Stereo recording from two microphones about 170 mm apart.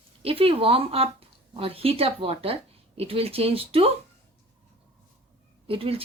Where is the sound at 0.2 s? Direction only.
35° right (ahead or behind).